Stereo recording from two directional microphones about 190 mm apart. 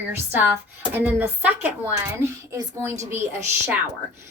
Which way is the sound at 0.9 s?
10° right (ahead or behind).